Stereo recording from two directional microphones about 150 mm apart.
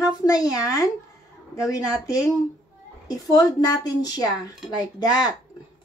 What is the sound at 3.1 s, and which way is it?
Speech, 25° left (ahead or behind).